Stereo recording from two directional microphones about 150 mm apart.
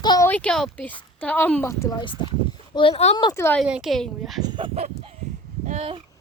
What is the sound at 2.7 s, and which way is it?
Speech, 40° left (ahead or behind).